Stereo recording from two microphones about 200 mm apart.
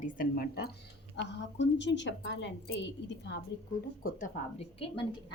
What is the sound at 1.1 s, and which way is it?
A woman's voice, 60° left (ahead or behind).